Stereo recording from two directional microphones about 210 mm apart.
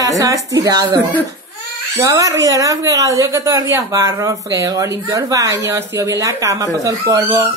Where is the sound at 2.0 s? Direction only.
15° right (ahead or behind).